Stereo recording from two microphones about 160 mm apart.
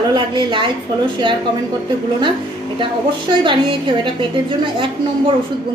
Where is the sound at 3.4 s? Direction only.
30° right (ahead or behind).